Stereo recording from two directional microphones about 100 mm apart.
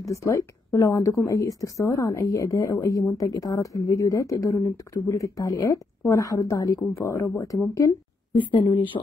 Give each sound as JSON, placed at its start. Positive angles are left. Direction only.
{"t": 0.1, "sound": "a woman's voice", "side_deg": 35}
{"t": 8.4, "sound": "speech", "side_deg": 50}